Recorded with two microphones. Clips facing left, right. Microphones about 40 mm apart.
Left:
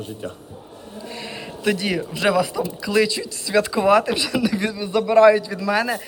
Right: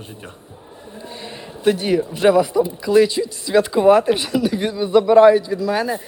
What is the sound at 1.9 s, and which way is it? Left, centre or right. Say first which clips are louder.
Speech: right 7 dB; left.